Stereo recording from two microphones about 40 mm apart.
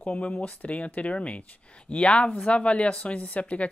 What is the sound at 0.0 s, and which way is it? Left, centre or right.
Speech, left.